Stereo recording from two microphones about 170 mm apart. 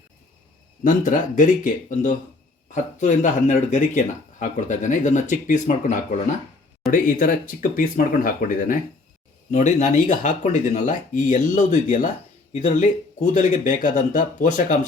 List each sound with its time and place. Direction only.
0.9 s speech: 50° left (ahead or behind)